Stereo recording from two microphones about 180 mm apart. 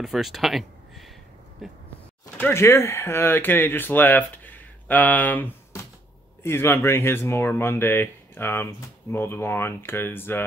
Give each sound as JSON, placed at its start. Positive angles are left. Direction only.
{"t": 0.0, "sound": "speech", "side_deg": 0}
{"t": 2.3, "sound": "speech", "side_deg": 10}